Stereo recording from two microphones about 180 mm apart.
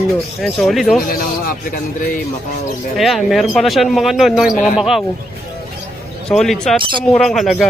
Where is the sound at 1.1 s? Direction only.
55° left (ahead or behind).